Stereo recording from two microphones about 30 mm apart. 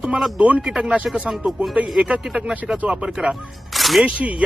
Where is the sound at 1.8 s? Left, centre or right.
Right.